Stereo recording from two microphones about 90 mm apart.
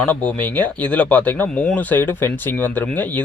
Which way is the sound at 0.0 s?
15° left (ahead or behind).